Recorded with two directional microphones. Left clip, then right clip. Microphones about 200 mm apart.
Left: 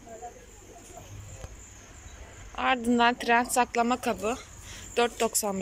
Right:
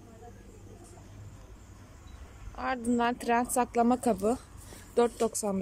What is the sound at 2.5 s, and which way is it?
Speech, 5° right (ahead or behind).